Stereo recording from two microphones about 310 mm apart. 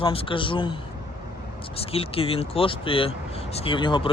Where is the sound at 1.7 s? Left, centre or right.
Centre.